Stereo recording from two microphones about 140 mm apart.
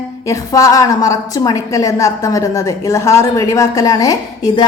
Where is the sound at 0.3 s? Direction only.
25° left (ahead or behind).